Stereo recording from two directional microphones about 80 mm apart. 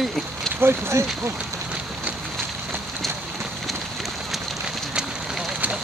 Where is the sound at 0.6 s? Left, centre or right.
Right.